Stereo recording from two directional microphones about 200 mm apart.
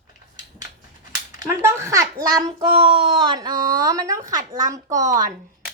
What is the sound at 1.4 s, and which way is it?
A woman's voice, 15° right (ahead or behind).